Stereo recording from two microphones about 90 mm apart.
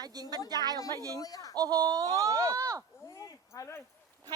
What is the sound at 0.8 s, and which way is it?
Speech, 40° left (ahead or behind).